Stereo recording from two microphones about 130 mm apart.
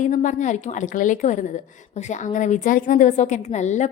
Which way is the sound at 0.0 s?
75° left (ahead or behind).